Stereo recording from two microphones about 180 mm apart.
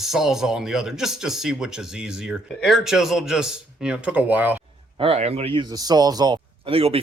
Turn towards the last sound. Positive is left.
turn(degrees=-30)  # may be behind; listen again after turning